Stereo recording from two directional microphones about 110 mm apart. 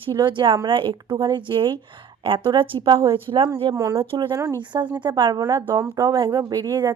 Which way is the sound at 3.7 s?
30° right (ahead or behind).